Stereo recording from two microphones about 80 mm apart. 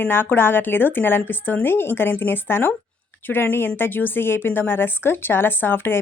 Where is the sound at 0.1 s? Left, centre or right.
Left.